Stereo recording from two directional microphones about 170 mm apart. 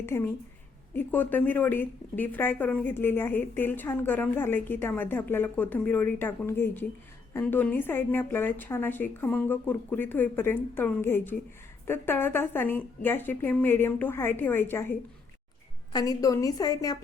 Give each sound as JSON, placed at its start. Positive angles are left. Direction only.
{"t": 0.0, "sound": "a woman's voice", "side_deg": 15}